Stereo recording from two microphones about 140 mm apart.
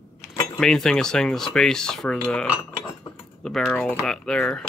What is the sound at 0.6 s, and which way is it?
Speech, 5° left (ahead or behind).